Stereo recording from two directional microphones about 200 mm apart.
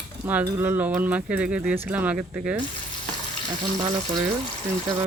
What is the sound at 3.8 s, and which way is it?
Speech, 20° right (ahead or behind).